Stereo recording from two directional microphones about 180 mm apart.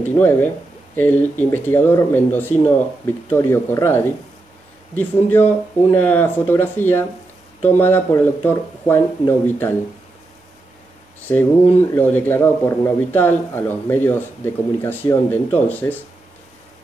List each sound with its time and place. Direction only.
0.1 s speech: 10° left (ahead or behind)
11.7 s speech: 10° left (ahead or behind)